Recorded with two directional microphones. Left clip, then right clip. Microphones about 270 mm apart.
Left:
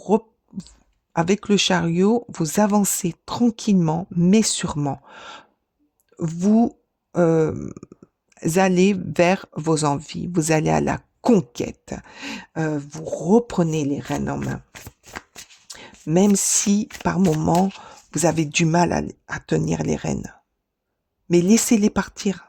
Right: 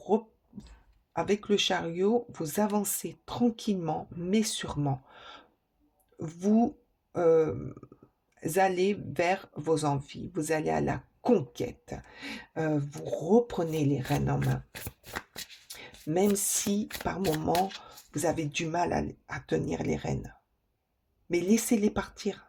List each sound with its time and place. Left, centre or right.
0.0 s a sound: left
1.1 s speech: left
14.7 s shuffling cards: centre
15.6 s speech: left